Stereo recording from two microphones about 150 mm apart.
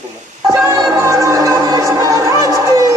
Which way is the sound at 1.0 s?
20° right (ahead or behind).